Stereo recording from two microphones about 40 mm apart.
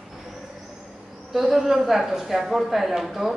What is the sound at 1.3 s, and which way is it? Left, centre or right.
Speech, centre.